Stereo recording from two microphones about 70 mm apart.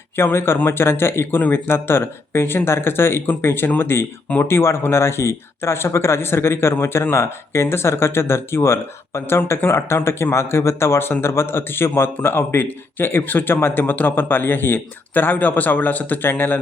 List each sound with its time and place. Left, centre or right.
0.2 s a man's voice: left